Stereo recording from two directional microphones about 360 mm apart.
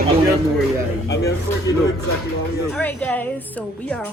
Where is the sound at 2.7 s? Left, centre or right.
Centre.